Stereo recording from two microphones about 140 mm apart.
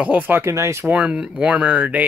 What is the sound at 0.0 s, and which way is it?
Speech, 10° right (ahead or behind).